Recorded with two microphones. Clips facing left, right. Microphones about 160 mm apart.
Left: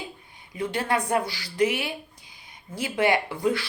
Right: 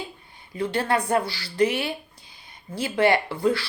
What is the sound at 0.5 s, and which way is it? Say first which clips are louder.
A woman's voice: right 2 dB; 15° left (ahead or behind).